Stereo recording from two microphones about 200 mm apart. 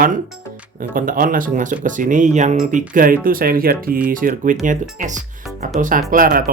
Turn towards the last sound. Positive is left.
turn(degrees=-45)  # may be behind; listen again after turning